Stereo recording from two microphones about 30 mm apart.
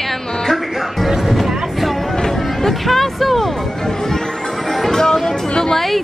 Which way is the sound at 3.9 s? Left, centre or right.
Centre.